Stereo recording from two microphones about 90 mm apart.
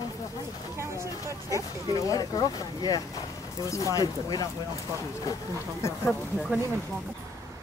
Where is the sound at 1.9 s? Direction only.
40° left (ahead or behind).